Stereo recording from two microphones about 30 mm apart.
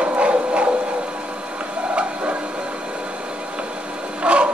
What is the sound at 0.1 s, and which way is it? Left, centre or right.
Printer, right.